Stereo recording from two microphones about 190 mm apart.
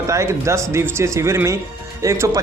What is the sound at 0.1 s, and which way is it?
A man's voice, 15° right (ahead or behind).